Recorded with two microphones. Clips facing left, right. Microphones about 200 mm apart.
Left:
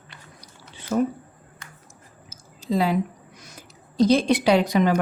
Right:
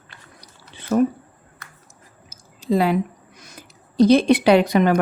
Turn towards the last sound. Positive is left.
turn(degrees=-60)  # may be behind; listen again after turning